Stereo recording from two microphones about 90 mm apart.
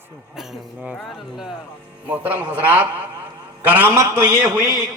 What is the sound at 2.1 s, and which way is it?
A man's voice, 20° right (ahead or behind).